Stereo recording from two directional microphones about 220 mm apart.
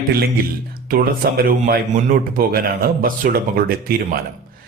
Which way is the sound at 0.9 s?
40° right (ahead or behind).